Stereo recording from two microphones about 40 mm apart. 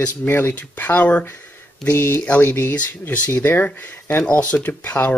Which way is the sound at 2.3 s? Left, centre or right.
Left.